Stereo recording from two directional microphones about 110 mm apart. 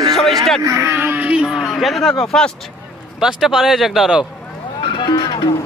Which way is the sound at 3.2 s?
5° right (ahead or behind).